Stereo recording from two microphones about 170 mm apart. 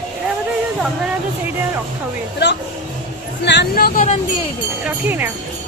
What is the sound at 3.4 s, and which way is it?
Speech, 85° left.